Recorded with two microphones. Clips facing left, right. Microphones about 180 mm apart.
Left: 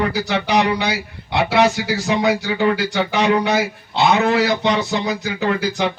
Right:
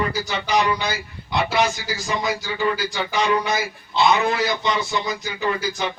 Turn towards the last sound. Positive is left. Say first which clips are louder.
# left 4 dB
turn(degrees=70)  # may be behind; listen again after turning